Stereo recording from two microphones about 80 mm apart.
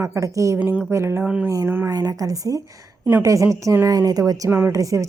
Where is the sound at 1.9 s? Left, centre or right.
Right.